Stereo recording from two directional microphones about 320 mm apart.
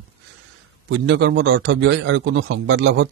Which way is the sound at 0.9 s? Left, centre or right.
Right.